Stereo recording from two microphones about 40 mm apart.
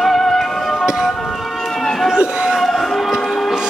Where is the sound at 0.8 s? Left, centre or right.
Centre.